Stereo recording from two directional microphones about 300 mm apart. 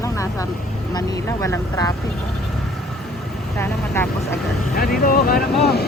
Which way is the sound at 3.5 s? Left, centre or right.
Centre.